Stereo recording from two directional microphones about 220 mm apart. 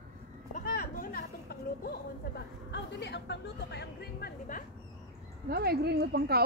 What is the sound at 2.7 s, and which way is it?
Speech, 50° left (ahead or behind).